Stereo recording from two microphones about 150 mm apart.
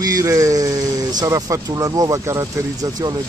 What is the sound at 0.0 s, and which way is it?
Speech, 25° right (ahead or behind).